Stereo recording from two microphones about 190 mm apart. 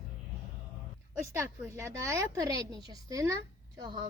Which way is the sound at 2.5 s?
25° left (ahead or behind).